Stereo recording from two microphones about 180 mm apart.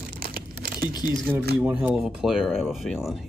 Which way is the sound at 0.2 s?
55° right (ahead or behind).